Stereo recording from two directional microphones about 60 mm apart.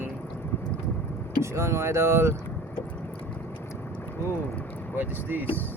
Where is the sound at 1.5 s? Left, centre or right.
Right.